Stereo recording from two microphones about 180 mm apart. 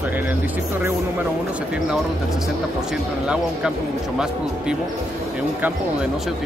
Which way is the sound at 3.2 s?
5° right (ahead or behind).